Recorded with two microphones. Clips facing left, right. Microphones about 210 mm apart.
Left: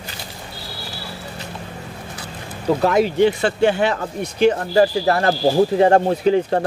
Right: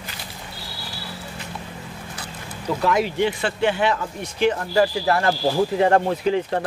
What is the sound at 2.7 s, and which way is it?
Speech, 40° left (ahead or behind).